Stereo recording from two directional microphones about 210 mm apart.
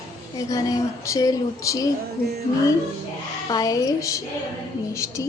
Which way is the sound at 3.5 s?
15° left (ahead or behind).